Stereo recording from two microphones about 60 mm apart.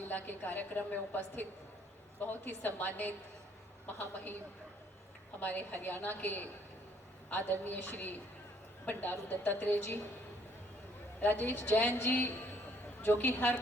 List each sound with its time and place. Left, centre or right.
0.3 s a woman's voice: left
5.4 s a woman's voice: left
11.2 s a woman's voice: left